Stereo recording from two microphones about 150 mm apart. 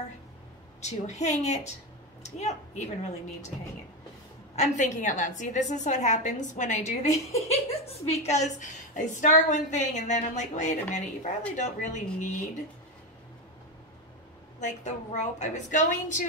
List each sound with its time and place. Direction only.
0.7 s a woman's voice: 50° left (ahead or behind)
4.6 s a woman's voice: 55° left (ahead or behind)
14.6 s a woman's voice: 55° left (ahead or behind)